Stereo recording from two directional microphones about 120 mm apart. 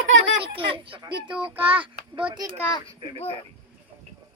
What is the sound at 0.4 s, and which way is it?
Speech, 45° right (ahead or behind).